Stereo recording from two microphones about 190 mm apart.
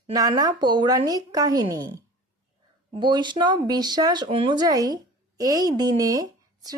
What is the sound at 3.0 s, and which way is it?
Speech, 25° right (ahead or behind).